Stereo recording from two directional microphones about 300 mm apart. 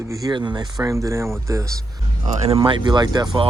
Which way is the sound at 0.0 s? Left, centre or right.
Centre.